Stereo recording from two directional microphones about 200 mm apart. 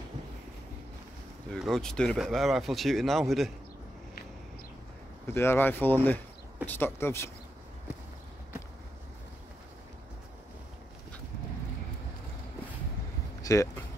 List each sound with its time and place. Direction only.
1.5 s speech: centre (ahead or behind)
5.2 s speech: 10° left (ahead or behind)
13.4 s a sound: 15° left (ahead or behind)